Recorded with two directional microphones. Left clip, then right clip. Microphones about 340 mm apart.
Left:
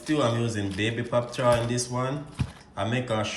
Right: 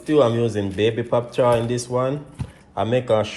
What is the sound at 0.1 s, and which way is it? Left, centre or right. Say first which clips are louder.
Speech: right 8 dB; centre.